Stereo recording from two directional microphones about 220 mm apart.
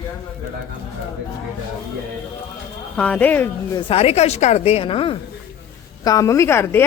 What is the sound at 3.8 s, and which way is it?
A woman's voice, 25° left (ahead or behind).